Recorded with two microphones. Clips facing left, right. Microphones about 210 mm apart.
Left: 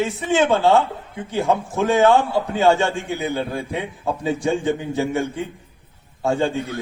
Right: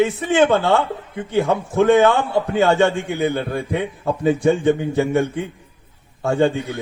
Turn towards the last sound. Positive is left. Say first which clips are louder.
# right 3 dB
turn(degrees=-55)  # may be behind; listen again after turning